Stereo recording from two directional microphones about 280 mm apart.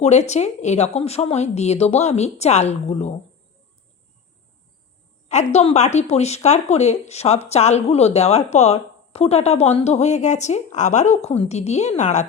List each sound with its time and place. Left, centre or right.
0.0 s speech: left
5.3 s speech: left